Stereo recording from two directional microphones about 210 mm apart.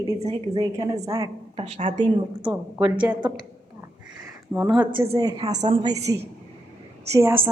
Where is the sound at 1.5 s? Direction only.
30° right (ahead or behind).